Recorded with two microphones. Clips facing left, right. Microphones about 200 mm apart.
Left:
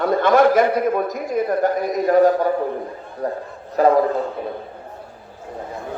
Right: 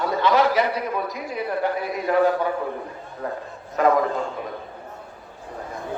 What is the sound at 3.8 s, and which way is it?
Speech, 35° left (ahead or behind).